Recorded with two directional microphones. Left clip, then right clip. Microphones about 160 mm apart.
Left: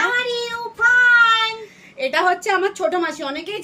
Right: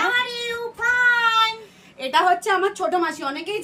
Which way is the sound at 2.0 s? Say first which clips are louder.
Even; 20° left (ahead or behind).